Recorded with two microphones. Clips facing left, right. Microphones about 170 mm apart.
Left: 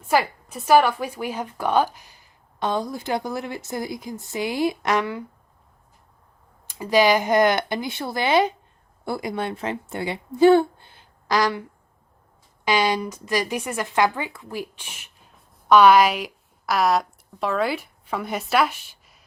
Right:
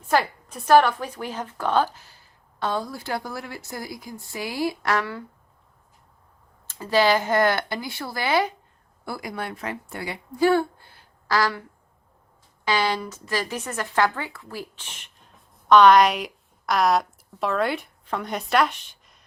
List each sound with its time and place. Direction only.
0.1 s a woman's voice: 10° left (ahead or behind)
6.7 s a woman's voice: 15° left (ahead or behind)
12.6 s a woman's voice: 15° left (ahead or behind)